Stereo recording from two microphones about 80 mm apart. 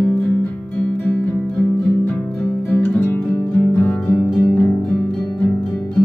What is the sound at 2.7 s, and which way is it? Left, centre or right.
Music, centre.